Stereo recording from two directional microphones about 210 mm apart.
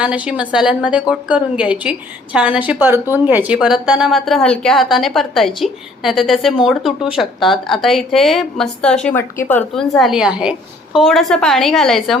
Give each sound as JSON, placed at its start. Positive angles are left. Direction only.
{"t": 0.0, "sound": "a woman's voice", "side_deg": -5}